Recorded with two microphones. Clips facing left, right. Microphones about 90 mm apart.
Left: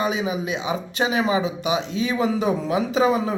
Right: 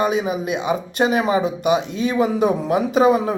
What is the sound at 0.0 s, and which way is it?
A man's voice, 50° right (ahead or behind).